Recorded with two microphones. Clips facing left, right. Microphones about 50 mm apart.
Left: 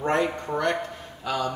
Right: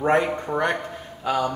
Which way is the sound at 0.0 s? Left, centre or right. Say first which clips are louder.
Right 4 dB; centre.